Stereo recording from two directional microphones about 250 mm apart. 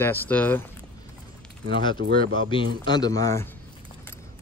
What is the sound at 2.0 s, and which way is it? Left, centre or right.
Speech, right.